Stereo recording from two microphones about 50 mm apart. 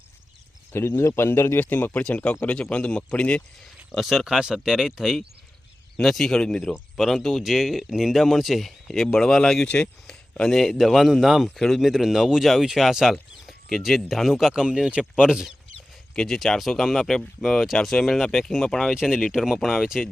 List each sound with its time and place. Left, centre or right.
0.7 s speech: left
1.5 s speech: left
3.9 s speech: centre
9.6 s speech: left
10.1 s speech: centre
16.1 s speech: centre
18.9 s speech: centre